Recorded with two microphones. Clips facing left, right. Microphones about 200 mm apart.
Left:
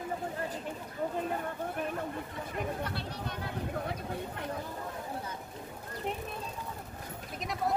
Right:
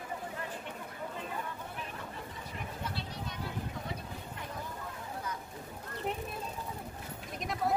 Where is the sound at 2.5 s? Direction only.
55° left (ahead or behind).